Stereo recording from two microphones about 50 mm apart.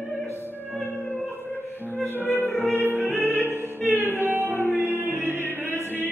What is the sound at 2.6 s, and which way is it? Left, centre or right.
Music, right.